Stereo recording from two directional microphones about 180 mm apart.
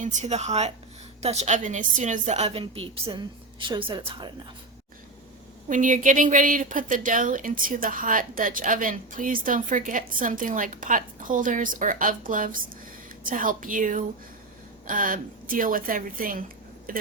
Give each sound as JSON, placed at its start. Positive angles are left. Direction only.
{"t": 0.0, "sound": "a woman's voice", "side_deg": -45}
{"t": 5.6, "sound": "a woman's voice", "side_deg": -45}